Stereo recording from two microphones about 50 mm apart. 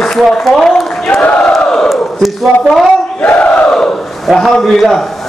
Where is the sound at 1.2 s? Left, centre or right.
Left.